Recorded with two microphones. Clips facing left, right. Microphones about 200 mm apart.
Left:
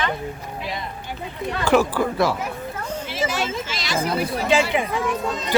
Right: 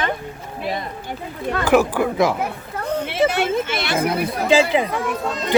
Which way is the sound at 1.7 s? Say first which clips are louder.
Right 2 dB; 15° right (ahead or behind).